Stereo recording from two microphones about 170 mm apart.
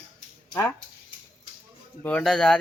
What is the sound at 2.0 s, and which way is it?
Speech, 5° left (ahead or behind).